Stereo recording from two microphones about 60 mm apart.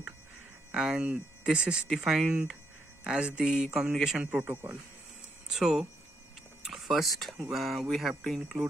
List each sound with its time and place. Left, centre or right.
0.7 s speech: centre
1.9 s speech: centre
5.5 s speech: centre
8.5 s speech: centre